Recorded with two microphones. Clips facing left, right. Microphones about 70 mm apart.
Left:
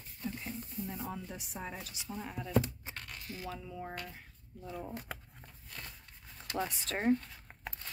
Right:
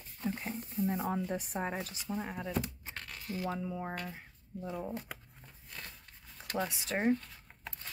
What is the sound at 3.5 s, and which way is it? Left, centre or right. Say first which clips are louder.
Speech: right 5 dB; right.